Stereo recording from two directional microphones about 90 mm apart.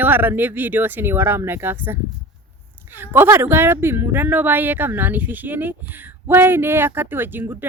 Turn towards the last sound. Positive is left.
turn(degrees=-20)  # may be behind; listen again after turning